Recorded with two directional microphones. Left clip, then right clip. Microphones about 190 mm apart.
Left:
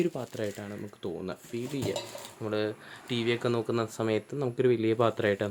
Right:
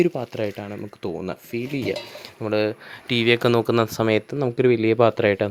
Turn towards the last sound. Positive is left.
turn(degrees=-35)  # may be behind; listen again after turning